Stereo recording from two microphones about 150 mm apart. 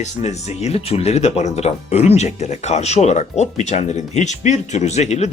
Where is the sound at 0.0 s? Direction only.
50° left (ahead or behind).